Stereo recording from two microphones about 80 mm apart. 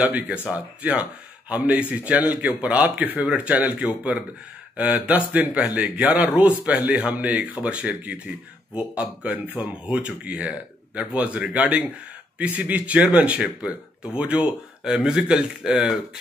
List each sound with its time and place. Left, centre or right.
0.0 s speech: centre